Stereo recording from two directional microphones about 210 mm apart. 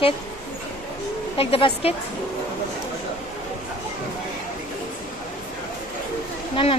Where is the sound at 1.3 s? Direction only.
25° left (ahead or behind).